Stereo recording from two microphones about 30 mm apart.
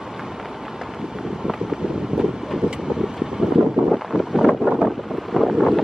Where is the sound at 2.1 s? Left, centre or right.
Right.